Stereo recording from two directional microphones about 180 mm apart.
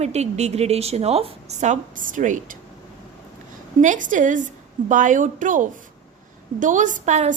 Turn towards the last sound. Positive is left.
turn(degrees=-40)  # may be behind; listen again after turning